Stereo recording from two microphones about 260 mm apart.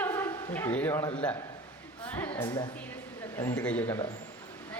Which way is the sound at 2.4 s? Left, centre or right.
Centre.